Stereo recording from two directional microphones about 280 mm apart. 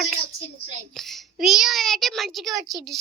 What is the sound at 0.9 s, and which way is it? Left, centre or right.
A child's voice, centre.